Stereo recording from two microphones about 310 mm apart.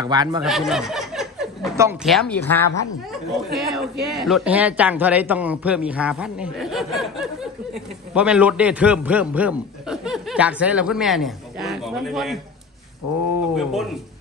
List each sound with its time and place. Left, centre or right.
0.0 s speech: centre
0.4 s a man's voice: centre
13.0 s a sound: left
13.6 s a man's voice: centre